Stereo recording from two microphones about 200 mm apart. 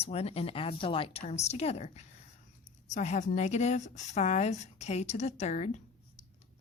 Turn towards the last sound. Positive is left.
turn(degrees=35)  # may be behind; listen again after turning